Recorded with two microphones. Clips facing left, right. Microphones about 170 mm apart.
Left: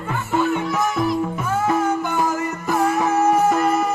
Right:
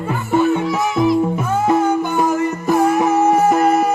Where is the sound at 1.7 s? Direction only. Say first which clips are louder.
Right 5 dB; 25° right (ahead or behind).